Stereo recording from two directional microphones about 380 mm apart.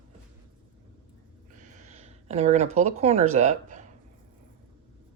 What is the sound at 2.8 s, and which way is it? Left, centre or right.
Speech, centre.